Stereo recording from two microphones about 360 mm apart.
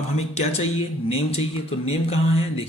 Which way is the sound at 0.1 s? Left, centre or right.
Centre.